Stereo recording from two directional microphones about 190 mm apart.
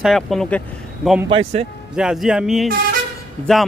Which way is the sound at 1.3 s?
30° right (ahead or behind).